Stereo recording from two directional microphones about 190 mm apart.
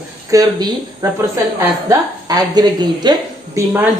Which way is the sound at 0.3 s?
20° right (ahead or behind).